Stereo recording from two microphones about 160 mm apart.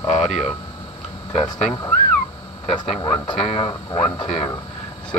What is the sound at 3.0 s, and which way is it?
Speech, 30° left (ahead or behind).